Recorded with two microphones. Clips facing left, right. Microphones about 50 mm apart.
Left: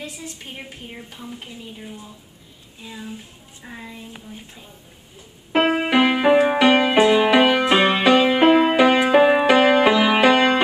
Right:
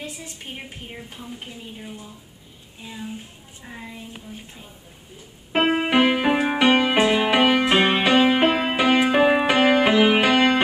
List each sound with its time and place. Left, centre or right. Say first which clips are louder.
2.8 s speech: even; centre
3.6 s a woman's voice: left 1 dB; centre
5.5 s keyboard: left 2 dB; centre
5.9 s music: left 2 dB; centre
8.0 s music: left 2 dB; centre
9.8 s music: left 1 dB; centre
10.1 s music: left 2 dB; centre